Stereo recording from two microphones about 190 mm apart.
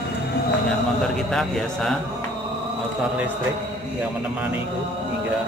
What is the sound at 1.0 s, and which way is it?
Speech, centre (ahead or behind).